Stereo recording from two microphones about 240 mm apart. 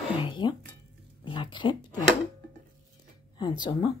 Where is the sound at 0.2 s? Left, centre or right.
Centre.